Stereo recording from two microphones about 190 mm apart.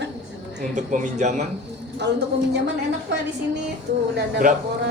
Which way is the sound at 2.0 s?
65° right (ahead or behind).